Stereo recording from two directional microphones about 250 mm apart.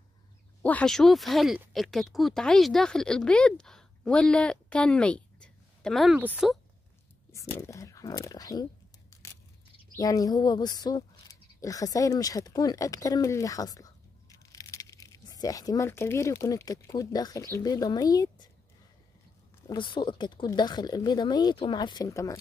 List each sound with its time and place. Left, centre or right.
0.6 s speech: centre
7.3 s speech: centre
9.1 s biting: centre
9.9 s speech: centre
19.7 s speech: centre